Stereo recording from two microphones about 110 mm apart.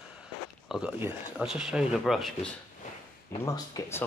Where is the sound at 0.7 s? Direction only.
10° right (ahead or behind).